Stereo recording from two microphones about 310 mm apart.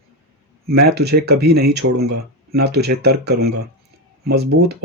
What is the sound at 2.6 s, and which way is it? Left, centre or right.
Speech, right.